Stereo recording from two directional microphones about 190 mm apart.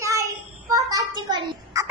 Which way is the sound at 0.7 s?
20° right (ahead or behind).